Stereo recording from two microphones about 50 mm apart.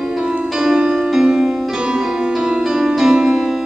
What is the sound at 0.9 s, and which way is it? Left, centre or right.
Music, centre.